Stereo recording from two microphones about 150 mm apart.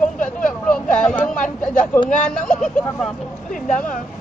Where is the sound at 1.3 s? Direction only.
55° left (ahead or behind).